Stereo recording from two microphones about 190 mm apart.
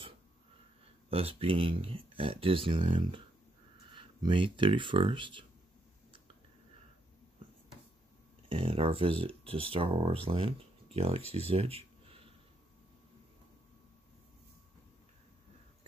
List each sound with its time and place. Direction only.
1.1 s speech: 30° right (ahead or behind)
8.5 s speech: 30° right (ahead or behind)